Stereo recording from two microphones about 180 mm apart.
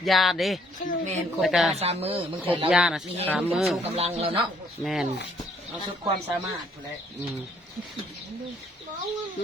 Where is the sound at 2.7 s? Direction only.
5° right (ahead or behind).